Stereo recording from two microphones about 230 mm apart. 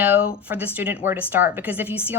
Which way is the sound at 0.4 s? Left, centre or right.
Centre.